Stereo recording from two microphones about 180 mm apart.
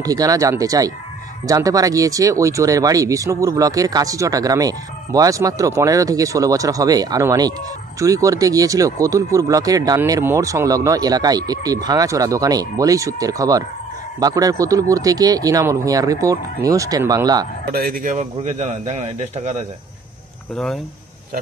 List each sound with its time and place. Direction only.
0.0 s speech: 20° right (ahead or behind)
17.6 s a man's voice: 55° right (ahead or behind); by 19.5 s 40° right (ahead or behind)
20.5 s speech: 5° left (ahead or behind)